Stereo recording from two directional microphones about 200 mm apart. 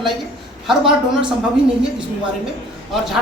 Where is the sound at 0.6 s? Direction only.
Centre (ahead or behind).